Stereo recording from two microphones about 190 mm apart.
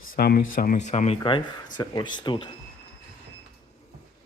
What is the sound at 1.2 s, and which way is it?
Speech, 25° left (ahead or behind).